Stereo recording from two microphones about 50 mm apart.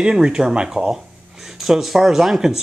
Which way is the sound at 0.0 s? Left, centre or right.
Centre.